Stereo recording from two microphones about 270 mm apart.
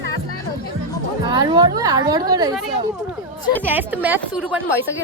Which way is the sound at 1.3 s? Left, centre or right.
Centre.